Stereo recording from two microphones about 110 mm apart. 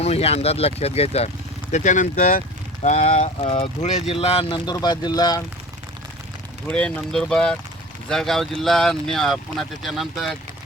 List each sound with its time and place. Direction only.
0.0 s speech: 70° left (ahead or behind)
1.7 s speech: 90° left
3.4 s speech: 60° left (ahead or behind); by 4.0 s 90° left
4.1 s speech: 60° left (ahead or behind); by 5.4 s 35° left (ahead or behind)
6.7 s speech: 10° left (ahead or behind)